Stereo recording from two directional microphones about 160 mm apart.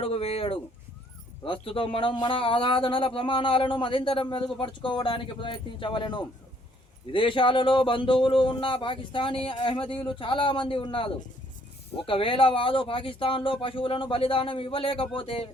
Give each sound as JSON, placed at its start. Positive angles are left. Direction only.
{"t": 0.0, "sound": "speech", "side_deg": 40}